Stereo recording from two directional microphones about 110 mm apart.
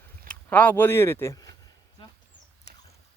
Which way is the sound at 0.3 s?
15° left (ahead or behind).